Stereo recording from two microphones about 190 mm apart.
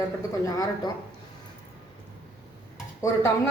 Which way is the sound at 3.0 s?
15° left (ahead or behind).